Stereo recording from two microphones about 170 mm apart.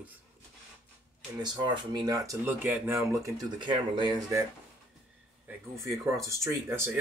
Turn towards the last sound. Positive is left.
turn(degrees=-15)  # may be behind; listen again after turning